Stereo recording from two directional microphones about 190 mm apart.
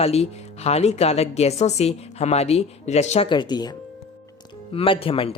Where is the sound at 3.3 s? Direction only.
25° left (ahead or behind).